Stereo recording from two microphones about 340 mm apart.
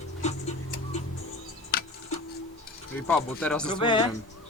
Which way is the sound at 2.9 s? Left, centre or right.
Centre.